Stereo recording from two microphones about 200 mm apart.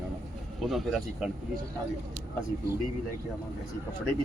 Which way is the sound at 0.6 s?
Centre (ahead or behind).